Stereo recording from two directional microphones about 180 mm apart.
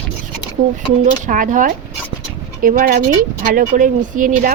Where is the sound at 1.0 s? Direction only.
45° right (ahead or behind).